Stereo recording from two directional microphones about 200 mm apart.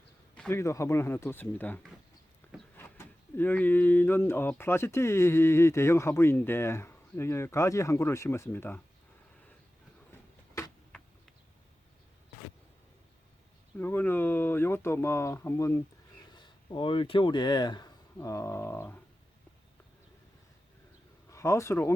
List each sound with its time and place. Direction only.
0.3 s speech: 10° left (ahead or behind)
2.4 s a sound: 10° left (ahead or behind)
3.3 s speech: 10° left (ahead or behind)
10.6 s a sound: 15° left (ahead or behind)
13.7 s speech: 10° left (ahead or behind)
21.2 s speech: 15° left (ahead or behind)